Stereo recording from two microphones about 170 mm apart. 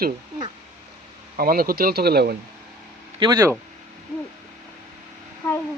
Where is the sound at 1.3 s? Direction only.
60° right (ahead or behind).